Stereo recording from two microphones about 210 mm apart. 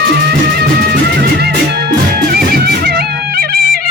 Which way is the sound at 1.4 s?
50° right (ahead or behind).